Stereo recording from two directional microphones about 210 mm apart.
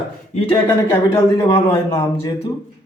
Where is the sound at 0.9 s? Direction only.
10° left (ahead or behind).